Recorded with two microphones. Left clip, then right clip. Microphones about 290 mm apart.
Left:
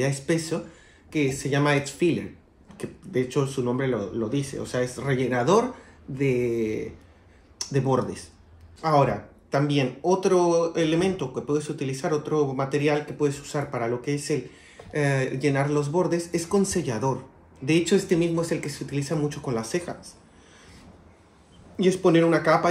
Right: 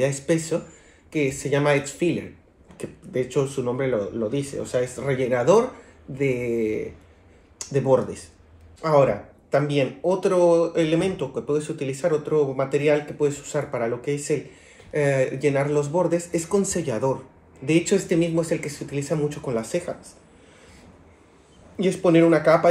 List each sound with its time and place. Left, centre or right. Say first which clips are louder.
0.0 s speech: right 3 dB; centre
9.5 s speech: right 3 dB; centre
21.7 s speech: right 2 dB; centre